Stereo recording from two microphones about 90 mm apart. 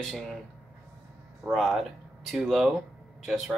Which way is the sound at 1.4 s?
Centre (ahead or behind).